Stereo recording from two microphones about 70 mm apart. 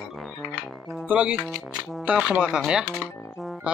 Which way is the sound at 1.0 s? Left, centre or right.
Centre.